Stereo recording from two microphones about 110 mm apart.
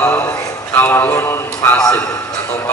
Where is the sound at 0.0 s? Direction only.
25° left (ahead or behind).